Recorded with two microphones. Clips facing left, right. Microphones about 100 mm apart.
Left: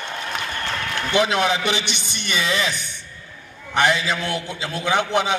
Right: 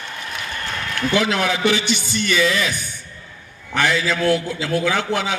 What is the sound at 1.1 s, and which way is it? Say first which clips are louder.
A man's voice: left 1 dB; 20° left (ahead or behind).